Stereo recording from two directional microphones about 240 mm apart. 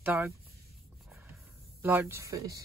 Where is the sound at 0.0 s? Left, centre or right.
Centre.